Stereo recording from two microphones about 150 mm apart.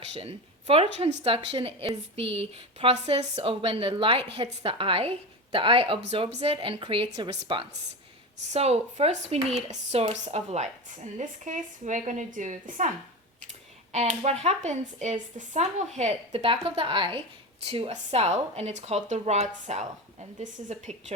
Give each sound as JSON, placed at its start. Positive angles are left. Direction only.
{"t": 0.2, "sound": "a woman's voice", "side_deg": -40}
{"t": 13.9, "sound": "speech", "side_deg": -50}